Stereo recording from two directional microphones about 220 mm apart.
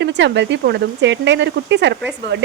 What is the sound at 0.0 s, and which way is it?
Speech, 50° right (ahead or behind).